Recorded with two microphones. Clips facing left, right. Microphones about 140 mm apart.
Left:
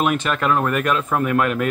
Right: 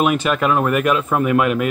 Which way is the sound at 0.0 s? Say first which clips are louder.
Right 3 dB; 10° right (ahead or behind).